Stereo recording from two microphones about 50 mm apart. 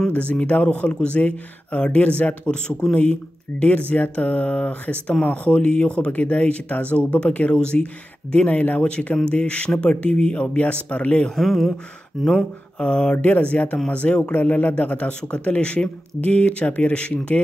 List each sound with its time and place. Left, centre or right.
0.0 s speech: left
11.3 s speech: centre
12.7 s speech: centre